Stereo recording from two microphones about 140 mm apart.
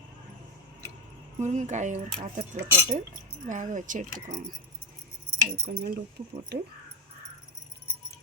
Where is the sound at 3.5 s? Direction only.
65° right (ahead or behind).